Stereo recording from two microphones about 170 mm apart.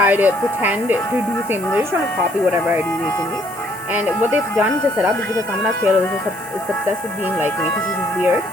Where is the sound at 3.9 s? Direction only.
10° right (ahead or behind).